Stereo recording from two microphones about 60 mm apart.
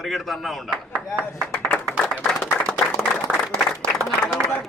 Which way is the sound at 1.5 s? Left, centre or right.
Left.